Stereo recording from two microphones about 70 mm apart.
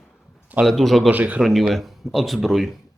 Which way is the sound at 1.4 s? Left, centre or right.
Centre.